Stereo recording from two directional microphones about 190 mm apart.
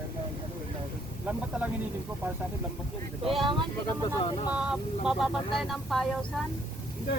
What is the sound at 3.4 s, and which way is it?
Speech, 25° right (ahead or behind).